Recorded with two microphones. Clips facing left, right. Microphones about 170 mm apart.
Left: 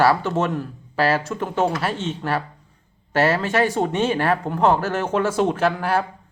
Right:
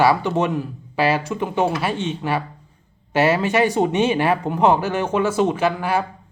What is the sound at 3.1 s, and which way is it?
A man's voice, 20° right (ahead or behind).